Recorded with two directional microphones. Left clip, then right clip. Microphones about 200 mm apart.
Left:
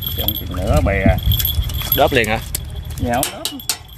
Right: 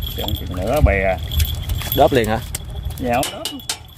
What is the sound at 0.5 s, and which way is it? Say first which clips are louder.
Speech: right 1 dB; 10° right (ahead or behind).